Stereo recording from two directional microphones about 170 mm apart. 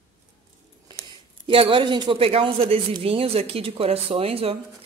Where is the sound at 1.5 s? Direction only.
30° right (ahead or behind).